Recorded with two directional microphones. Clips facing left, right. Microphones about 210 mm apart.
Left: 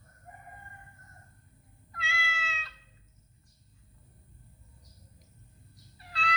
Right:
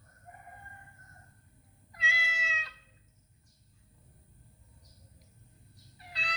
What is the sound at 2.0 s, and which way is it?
Cat, 15° right (ahead or behind).